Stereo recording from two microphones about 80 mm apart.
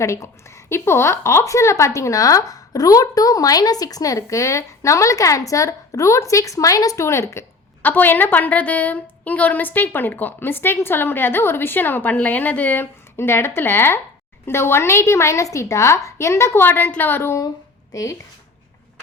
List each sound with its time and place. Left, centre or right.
0.0 s a woman's voice: left
7.8 s a woman's voice: left
17.9 s speech: left